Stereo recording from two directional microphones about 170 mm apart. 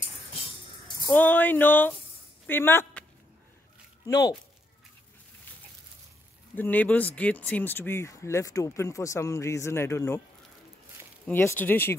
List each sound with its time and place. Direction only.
1.1 s speech: 10° left (ahead or behind)
4.0 s speech: 25° left (ahead or behind)
6.5 s speech: 10° left (ahead or behind)
11.2 s speech: 10° left (ahead or behind)